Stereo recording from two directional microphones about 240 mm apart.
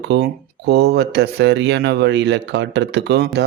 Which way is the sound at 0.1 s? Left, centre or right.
Right.